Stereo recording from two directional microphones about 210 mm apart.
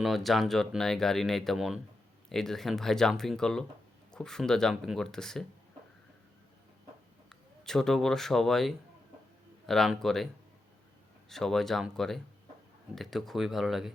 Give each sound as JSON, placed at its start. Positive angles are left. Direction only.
{"t": 0.0, "sound": "speech", "side_deg": 0}
{"t": 7.3, "sound": "speech", "side_deg": 0}
{"t": 11.3, "sound": "speech", "side_deg": 0}